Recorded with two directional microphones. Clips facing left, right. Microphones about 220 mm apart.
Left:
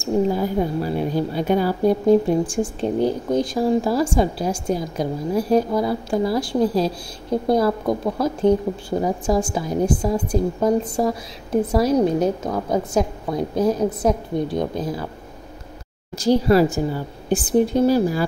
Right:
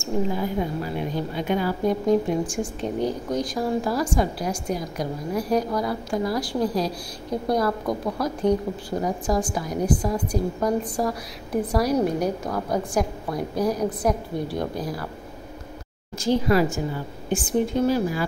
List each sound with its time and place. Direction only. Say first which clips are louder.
0.0 s a woman's voice: left 5 dB; 35° left (ahead or behind)
16.2 s speech: left 5 dB; 35° left (ahead or behind)